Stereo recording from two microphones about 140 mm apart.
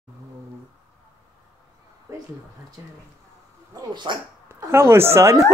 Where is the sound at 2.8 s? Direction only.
20° right (ahead or behind).